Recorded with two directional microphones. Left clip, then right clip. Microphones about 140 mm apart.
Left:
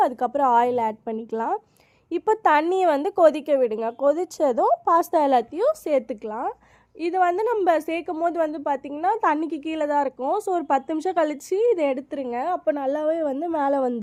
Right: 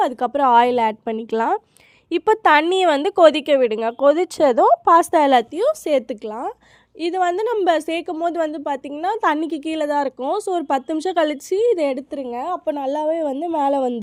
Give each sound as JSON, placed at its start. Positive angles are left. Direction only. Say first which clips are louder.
{"t": 0.0, "sound": "a woman's voice", "louder": "right 3 dB", "side_deg": -35}
{"t": 10.2, "sound": "speech", "louder": "right 2 dB", "side_deg": -30}